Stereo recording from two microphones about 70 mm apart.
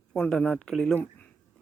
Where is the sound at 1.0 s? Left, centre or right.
Left.